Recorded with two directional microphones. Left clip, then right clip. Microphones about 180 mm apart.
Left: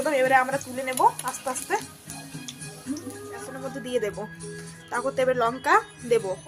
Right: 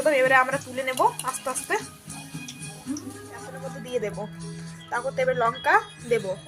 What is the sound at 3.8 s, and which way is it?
Speech, 30° left (ahead or behind).